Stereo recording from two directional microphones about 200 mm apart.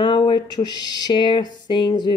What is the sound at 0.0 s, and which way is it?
Speech, 25° left (ahead or behind).